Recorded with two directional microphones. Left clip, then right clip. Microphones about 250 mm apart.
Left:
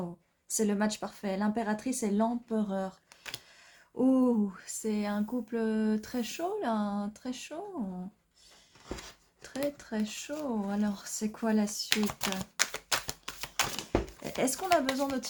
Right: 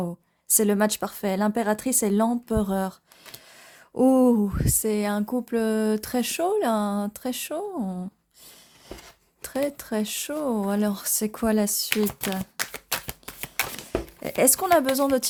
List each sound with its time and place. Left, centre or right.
0.4 s speech: right
3.9 s speech: right
9.4 s speech: right
12.5 s a sound: centre
13.2 s typewriter: centre
14.2 s speech: right